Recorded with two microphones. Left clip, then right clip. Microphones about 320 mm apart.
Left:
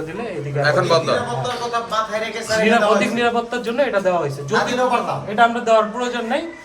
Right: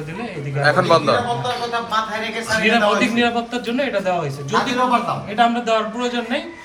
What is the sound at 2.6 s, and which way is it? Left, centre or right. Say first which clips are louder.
A man's voice: even; left.